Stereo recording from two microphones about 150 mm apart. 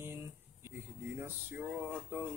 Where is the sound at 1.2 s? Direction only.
15° right (ahead or behind).